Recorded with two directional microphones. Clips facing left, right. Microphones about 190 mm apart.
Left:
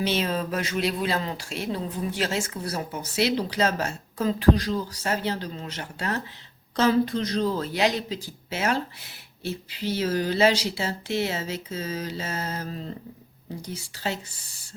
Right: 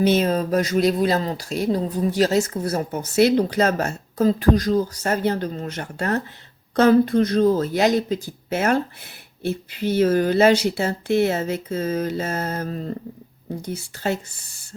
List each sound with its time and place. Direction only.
0.0 s speech: 45° right (ahead or behind)